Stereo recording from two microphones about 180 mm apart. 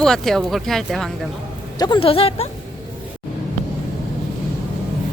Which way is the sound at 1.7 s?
25° left (ahead or behind).